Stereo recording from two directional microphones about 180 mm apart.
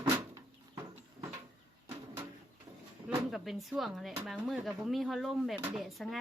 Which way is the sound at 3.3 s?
Centre (ahead or behind).